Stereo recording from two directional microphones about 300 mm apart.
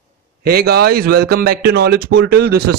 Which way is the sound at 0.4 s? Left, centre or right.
Right.